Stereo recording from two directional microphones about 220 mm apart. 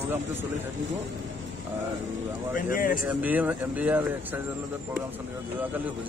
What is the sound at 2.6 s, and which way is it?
Speech, 40° left (ahead or behind).